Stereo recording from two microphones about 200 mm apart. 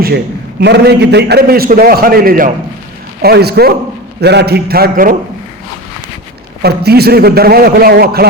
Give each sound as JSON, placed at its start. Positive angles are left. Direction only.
{"t": 0.6, "sound": "a man's voice", "side_deg": -55}
{"t": 6.6, "sound": "a man's voice", "side_deg": -55}